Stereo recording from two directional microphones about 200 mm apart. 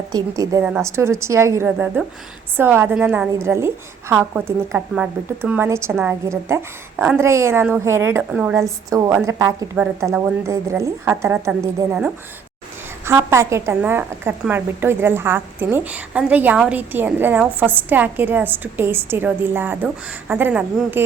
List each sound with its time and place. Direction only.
0.1 s a woman's voice: 15° right (ahead or behind)